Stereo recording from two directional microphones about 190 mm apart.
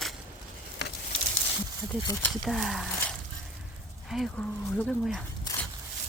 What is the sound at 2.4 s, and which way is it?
Speech, centre (ahead or behind).